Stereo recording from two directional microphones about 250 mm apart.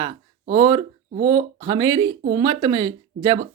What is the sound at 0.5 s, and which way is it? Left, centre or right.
Speech, centre.